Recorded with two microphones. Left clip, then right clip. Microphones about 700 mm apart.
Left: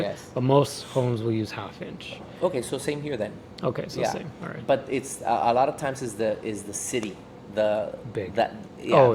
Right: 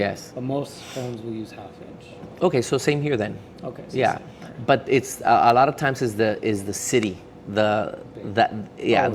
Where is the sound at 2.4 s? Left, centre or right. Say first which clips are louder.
Right 6 dB; right.